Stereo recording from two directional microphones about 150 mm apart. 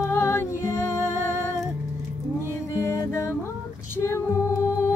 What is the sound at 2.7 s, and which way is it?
Music, 20° left (ahead or behind).